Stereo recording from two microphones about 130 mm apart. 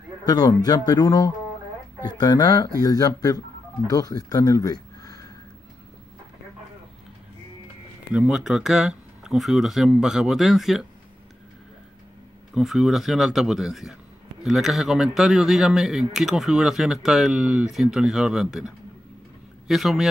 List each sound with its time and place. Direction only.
0.3 s speech: 30° left (ahead or behind)
4.3 s a sound: 25° left (ahead or behind)
8.1 s speech: 5° right (ahead or behind)
12.5 s speech: centre (ahead or behind)
19.7 s speech: centre (ahead or behind)